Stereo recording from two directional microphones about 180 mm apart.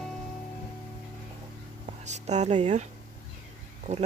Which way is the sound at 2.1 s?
40° right (ahead or behind).